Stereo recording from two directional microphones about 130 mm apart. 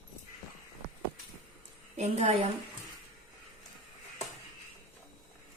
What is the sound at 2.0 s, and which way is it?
Speech, 55° right (ahead or behind).